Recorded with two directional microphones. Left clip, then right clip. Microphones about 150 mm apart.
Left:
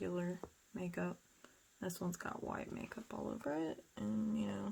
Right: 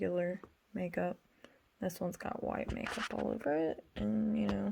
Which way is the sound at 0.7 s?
25° right (ahead or behind).